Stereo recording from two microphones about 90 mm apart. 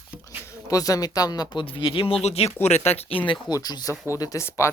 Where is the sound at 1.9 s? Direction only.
90° left.